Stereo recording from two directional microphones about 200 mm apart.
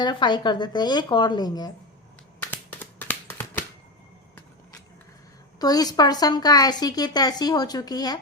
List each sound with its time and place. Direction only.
0.0 s a woman's voice: 20° left (ahead or behind)
3.0 s a sound: 10° left (ahead or behind)
5.5 s a woman's voice: 20° left (ahead or behind)